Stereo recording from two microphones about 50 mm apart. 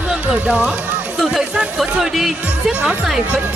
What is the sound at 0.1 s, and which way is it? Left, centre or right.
Music, right.